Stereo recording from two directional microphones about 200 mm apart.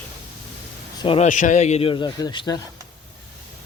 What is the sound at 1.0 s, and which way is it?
Speech, 25° left (ahead or behind).